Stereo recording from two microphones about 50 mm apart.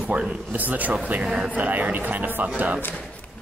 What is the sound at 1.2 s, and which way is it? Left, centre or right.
Speech, centre.